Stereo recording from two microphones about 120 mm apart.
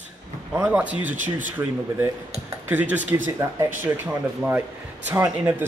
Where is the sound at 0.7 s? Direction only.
10° right (ahead or behind).